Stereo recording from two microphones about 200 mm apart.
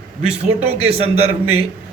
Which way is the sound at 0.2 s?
35° right (ahead or behind).